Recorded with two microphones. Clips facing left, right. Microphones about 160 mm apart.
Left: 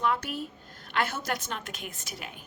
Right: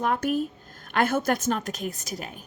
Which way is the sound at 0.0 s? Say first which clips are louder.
Right 5 dB; 45° right (ahead or behind).